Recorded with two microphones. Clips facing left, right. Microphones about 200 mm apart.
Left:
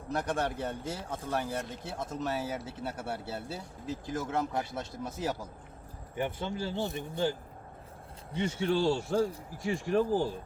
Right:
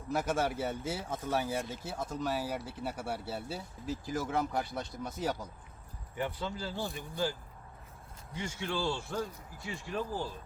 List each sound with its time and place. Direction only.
0.1 s speech: 5° right (ahead or behind)
6.1 s speech: 20° left (ahead or behind)
8.4 s a man's voice: 30° left (ahead or behind)
9.7 s speech: 45° left (ahead or behind)